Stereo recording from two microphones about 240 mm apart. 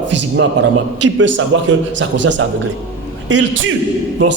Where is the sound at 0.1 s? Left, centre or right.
Right.